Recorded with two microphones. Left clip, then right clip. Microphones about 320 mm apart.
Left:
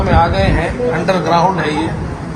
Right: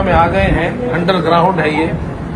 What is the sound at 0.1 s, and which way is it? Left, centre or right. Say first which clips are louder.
Speech: right 1 dB; centre.